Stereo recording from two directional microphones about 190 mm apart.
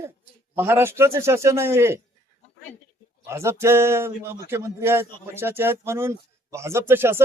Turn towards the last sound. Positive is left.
turn(degrees=-10)  # may be behind; listen again after turning